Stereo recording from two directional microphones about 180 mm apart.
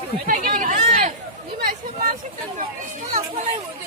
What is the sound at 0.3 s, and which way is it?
Speech, 50° right (ahead or behind).